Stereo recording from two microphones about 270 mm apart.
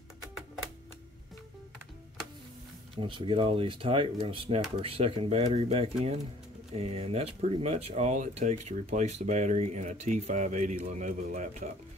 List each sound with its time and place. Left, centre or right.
3.0 s speech: centre